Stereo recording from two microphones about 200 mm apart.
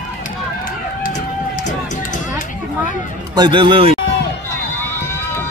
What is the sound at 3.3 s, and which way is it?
Speech, 25° right (ahead or behind).